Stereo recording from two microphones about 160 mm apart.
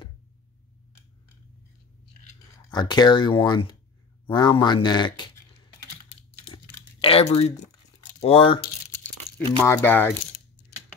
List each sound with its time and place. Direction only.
2.7 s speech: 25° left (ahead or behind)
6.5 s crumpling: 35° left (ahead or behind)
8.2 s speech: 35° left (ahead or behind)
9.6 s speech: 10° left (ahead or behind)